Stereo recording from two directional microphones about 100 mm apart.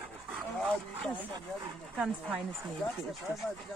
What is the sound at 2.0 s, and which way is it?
Speech, 10° right (ahead or behind).